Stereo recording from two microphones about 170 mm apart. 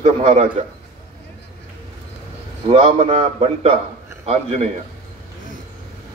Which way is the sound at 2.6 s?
35° right (ahead or behind).